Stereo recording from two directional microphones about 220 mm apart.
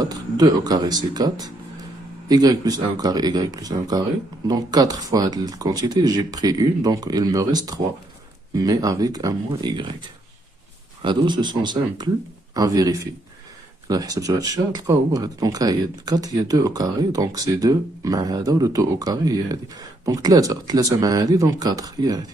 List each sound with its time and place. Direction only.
0.0 s speech: 20° right (ahead or behind)
11.0 s speech: 20° right (ahead or behind)